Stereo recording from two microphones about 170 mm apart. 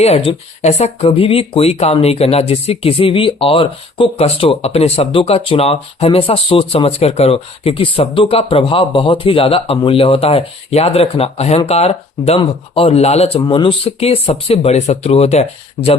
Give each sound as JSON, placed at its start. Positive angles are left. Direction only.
{"t": 0.0, "sound": "speech", "side_deg": 35}